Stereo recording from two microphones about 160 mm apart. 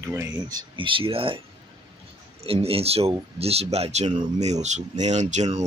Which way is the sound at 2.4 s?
35° right (ahead or behind).